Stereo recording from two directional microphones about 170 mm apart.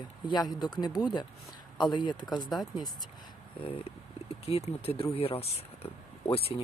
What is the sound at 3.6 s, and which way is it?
Speech, 35° left (ahead or behind).